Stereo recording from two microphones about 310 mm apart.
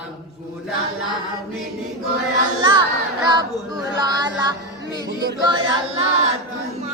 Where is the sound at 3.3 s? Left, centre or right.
Centre.